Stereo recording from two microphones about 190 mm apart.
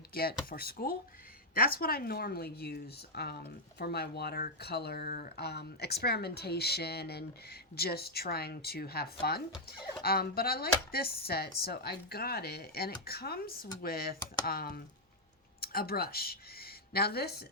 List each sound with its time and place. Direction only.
0.1 s speech: 50° left (ahead or behind)